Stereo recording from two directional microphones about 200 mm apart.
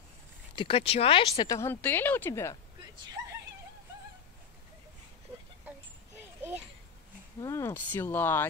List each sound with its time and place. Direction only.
0.6 s speech: 25° left (ahead or behind); by 2.5 s 10° left (ahead or behind)
7.3 s speech: 15° left (ahead or behind)